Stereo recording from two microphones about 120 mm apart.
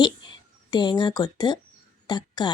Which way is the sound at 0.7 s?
40° left (ahead or behind).